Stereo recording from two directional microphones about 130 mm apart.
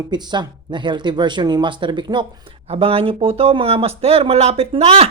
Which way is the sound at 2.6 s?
45° right (ahead or behind).